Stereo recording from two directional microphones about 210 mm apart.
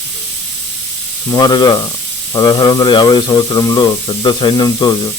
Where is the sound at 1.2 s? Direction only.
20° left (ahead or behind).